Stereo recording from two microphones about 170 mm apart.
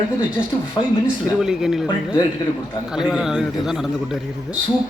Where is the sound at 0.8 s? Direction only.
30° left (ahead or behind).